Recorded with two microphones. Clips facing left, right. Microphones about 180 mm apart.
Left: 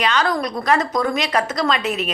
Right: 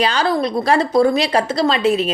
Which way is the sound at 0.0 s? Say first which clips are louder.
Right 3 dB; 30° right (ahead or behind).